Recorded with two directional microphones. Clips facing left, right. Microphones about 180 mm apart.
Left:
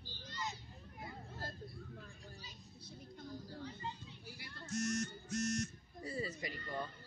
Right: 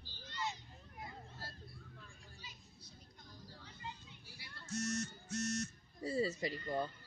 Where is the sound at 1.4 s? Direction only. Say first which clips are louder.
Left 6 dB; 45° left (ahead or behind).